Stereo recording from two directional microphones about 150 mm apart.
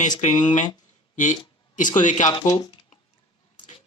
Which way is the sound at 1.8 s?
60° left (ahead or behind).